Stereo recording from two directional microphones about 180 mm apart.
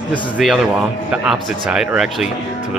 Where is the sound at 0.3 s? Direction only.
5° right (ahead or behind).